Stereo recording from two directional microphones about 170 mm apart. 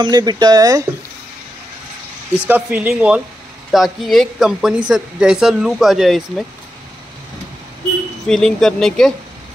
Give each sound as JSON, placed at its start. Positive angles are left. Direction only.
{"t": 0.0, "sound": "speech", "side_deg": -25}
{"t": 2.4, "sound": "speech", "side_deg": -10}
{"t": 8.3, "sound": "speech", "side_deg": 5}